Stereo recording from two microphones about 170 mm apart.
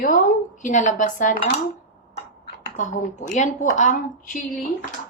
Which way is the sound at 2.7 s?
45° left (ahead or behind).